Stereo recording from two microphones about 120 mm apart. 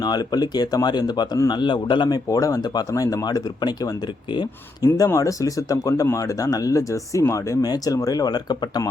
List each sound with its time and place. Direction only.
0.0 s a man's voice: 35° left (ahead or behind)
4.9 s speech: 25° left (ahead or behind)